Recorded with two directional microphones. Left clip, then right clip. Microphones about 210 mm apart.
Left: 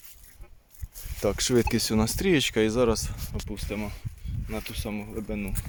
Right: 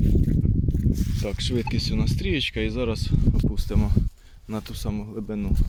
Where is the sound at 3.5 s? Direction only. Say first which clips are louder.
Right 4 dB; 25° right (ahead or behind).